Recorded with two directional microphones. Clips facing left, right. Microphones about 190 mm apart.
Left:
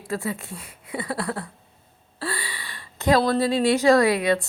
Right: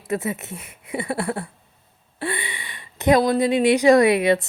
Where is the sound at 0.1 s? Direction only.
20° right (ahead or behind).